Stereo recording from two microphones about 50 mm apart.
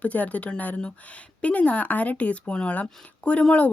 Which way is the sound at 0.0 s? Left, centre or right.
Left.